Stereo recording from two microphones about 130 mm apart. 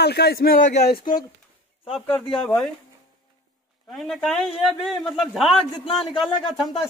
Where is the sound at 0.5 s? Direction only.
75° left (ahead or behind).